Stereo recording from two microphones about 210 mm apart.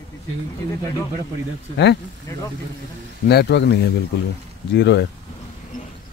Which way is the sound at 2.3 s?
15° left (ahead or behind).